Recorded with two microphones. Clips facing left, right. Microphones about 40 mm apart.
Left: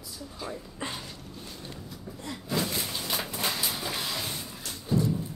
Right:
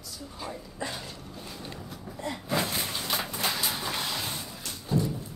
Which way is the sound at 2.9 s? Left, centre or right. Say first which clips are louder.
Right 1 dB; centre.